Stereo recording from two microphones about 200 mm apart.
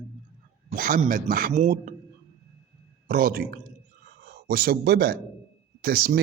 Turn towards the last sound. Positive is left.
turn(degrees=-50)  # may be behind; listen again after turning